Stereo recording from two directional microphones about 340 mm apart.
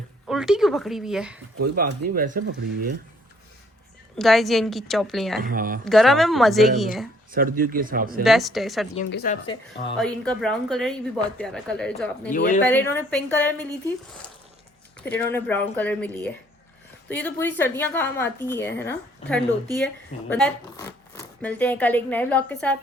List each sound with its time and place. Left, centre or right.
0.3 s speech: centre
1.6 s speech: right
4.2 s speech: centre
5.4 s speech: right
5.8 s speech: centre
7.3 s speech: right
8.2 s speech: centre
9.0 s speech: left
10.0 s speech: centre
12.3 s speech: left
12.7 s speech: centre
15.0 s a woman's voice: centre